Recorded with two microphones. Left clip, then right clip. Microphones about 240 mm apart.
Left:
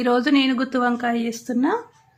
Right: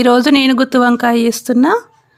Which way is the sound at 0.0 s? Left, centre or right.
Right.